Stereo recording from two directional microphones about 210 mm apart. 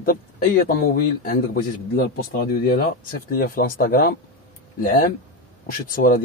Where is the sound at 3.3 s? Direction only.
45° left (ahead or behind).